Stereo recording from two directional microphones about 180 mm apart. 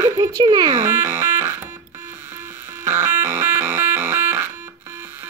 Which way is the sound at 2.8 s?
15° right (ahead or behind).